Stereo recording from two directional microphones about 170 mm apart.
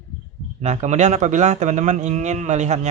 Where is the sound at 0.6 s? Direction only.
40° right (ahead or behind).